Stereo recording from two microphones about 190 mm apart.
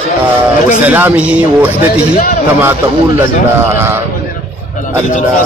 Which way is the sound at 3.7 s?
10° right (ahead or behind).